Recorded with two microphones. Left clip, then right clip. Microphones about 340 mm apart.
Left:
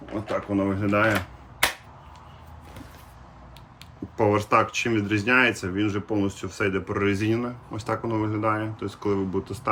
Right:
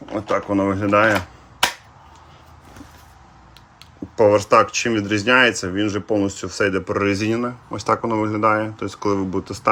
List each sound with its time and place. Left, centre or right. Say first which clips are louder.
0.0 s speech: right 7 dB; centre
4.2 s speech: right 7 dB; centre